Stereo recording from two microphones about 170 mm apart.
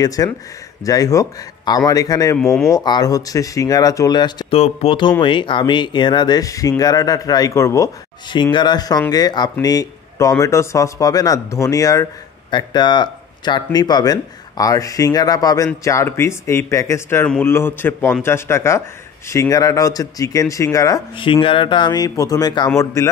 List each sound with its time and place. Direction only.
0.0 s speech: 20° left (ahead or behind)
2.3 s speech: centre (ahead or behind)
2.7 s speech: 25° left (ahead or behind)
4.6 s a man's voice: 35° left (ahead or behind)